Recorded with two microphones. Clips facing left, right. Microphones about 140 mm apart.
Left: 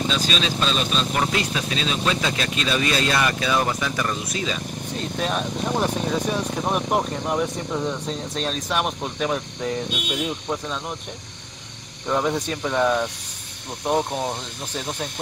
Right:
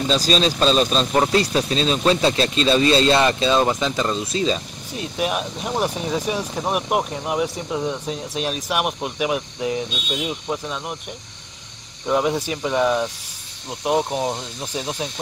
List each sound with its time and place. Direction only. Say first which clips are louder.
0.1 s speech: right 5 dB; 35° right (ahead or behind)
4.9 s speech: right 2 dB; 10° right (ahead or behind)
12.1 s speech: right 2 dB; 5° right (ahead or behind)